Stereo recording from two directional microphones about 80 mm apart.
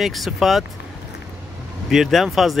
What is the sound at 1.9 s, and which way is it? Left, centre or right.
Speech, centre.